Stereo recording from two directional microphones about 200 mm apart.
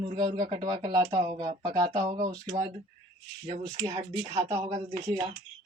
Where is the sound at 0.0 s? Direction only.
20° right (ahead or behind).